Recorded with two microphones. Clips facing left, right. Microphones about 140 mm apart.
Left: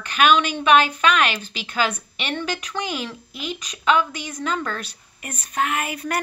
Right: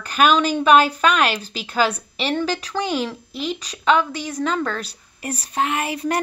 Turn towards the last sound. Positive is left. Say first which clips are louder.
# right 3 dB
turn(degrees=-30)  # may be behind; listen again after turning